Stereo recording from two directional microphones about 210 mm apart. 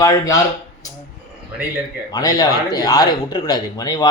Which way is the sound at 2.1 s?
15° left (ahead or behind).